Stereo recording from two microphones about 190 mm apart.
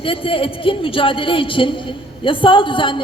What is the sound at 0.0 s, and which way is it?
A woman's voice, 30° left (ahead or behind).